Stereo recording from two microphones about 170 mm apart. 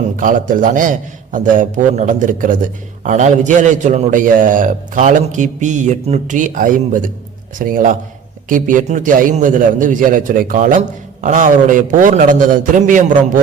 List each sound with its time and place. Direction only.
0.2 s a man's voice: 50° right (ahead or behind)